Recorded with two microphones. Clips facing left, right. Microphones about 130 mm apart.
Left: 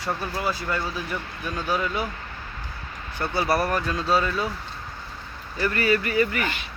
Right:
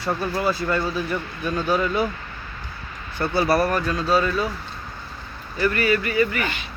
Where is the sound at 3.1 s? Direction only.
15° left (ahead or behind).